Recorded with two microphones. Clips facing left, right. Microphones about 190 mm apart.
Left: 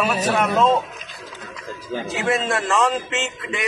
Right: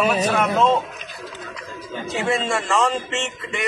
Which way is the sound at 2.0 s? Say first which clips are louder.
Even; centre (ahead or behind).